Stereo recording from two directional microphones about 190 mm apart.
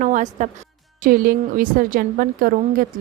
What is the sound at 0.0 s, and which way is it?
A woman's voice, 40° right (ahead or behind).